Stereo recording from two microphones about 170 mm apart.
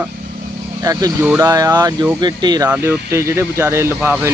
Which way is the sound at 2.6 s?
10° right (ahead or behind).